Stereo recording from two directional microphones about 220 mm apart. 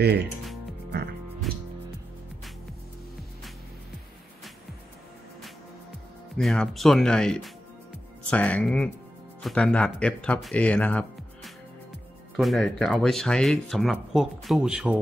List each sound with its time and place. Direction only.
0.0 s speech: 50° right (ahead or behind)
1.5 s music: centre (ahead or behind)
6.3 s speech: 5° left (ahead or behind)